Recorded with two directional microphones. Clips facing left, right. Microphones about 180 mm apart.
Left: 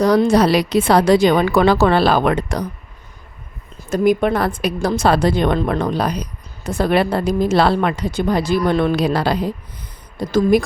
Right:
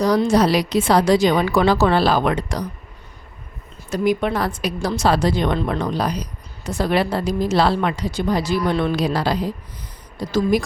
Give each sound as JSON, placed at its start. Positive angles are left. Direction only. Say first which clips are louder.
{"t": 0.0, "sound": "a woman's voice", "louder": "left 3 dB", "side_deg": 60}
{"t": 3.8, "sound": "a woman's voice", "louder": "left 4 dB", "side_deg": 50}